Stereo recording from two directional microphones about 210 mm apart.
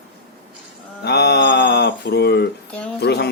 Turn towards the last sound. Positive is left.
turn(degrees=50)  # may be behind; listen again after turning